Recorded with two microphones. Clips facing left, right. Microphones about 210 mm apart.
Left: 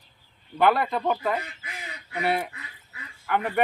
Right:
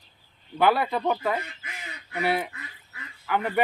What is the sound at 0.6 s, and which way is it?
Speech, 5° right (ahead or behind).